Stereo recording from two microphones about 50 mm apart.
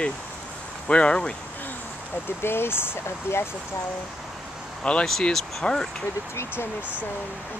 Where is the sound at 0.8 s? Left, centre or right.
Left.